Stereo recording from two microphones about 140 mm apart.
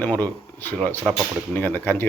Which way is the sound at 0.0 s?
10° left (ahead or behind).